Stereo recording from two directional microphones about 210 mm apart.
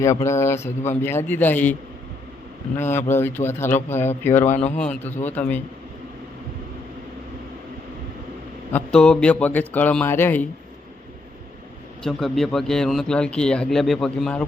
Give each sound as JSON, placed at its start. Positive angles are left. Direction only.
{"t": 0.0, "sound": "speech", "side_deg": 15}
{"t": 2.7, "sound": "speech", "side_deg": 10}
{"t": 4.4, "sound": "speech", "side_deg": 35}
{"t": 5.0, "sound": "speech", "side_deg": 10}
{"t": 8.7, "sound": "speech", "side_deg": 5}
{"t": 12.0, "sound": "a man's voice", "side_deg": 0}